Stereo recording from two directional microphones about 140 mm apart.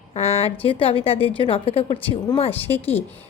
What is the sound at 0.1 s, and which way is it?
A woman's voice, 45° left (ahead or behind).